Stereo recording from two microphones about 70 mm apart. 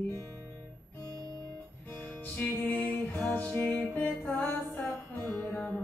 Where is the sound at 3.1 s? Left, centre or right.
Centre.